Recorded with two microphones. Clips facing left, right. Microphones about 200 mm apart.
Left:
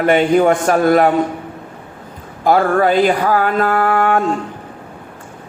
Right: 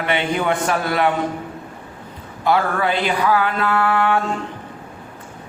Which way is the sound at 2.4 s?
45° left (ahead or behind).